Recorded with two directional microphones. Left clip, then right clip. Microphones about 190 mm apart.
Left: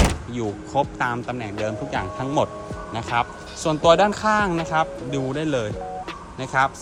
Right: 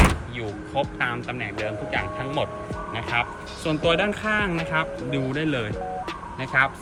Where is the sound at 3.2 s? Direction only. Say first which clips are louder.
Left 4 dB; 20° left (ahead or behind).